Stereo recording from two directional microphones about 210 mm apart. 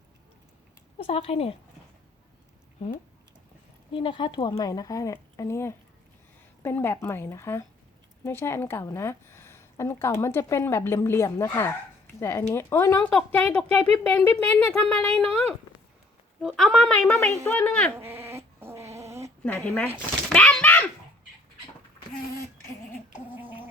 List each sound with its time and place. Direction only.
0.9 s speech: 30° left (ahead or behind)
3.9 s a woman's voice: 25° left (ahead or behind); by 17.9 s 5° left (ahead or behind)
17.9 s dog: 10° right (ahead or behind)
19.5 s a woman's voice: 5° left (ahead or behind)
20.3 s a sound: 5° left (ahead or behind)
23.1 s a sound: 10° right (ahead or behind)